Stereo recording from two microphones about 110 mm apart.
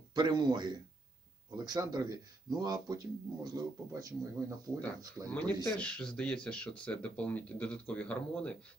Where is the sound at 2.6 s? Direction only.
35° right (ahead or behind).